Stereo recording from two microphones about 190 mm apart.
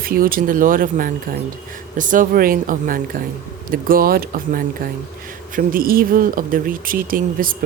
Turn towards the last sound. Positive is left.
turn(degrees=-50)  # may be behind; listen again after turning